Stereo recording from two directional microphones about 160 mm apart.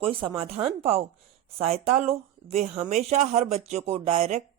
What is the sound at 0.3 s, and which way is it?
A woman's voice, 40° right (ahead or behind).